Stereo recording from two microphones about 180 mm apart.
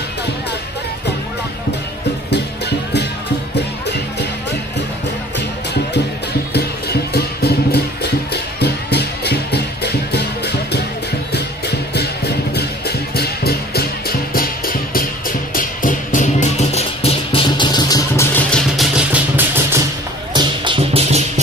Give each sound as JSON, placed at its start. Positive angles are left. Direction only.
{"t": 2.3, "sound": "music", "side_deg": 70}
{"t": 6.5, "sound": "music", "side_deg": 65}
{"t": 18.5, "sound": "vehicle", "side_deg": 0}
{"t": 19.3, "sound": "music", "side_deg": -10}
{"t": 20.3, "sound": "music", "side_deg": -25}